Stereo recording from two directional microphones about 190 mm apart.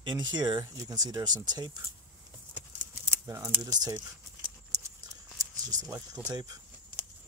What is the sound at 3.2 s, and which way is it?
Speech, 15° right (ahead or behind).